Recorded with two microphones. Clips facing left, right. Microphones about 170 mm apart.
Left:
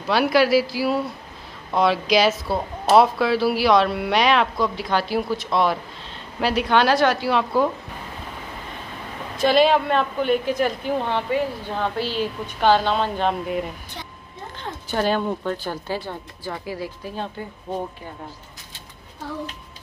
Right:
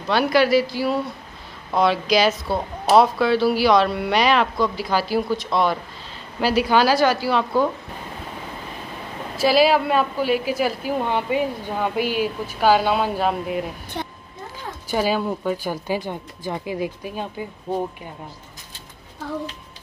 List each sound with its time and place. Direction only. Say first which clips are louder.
0.1 s speech: even; centre (ahead or behind)
9.4 s a woman's voice: even; 5° right (ahead or behind)
14.0 s a sound: right 8 dB; 55° right (ahead or behind)
14.6 s a woman's voice: right 1 dB; 10° right (ahead or behind)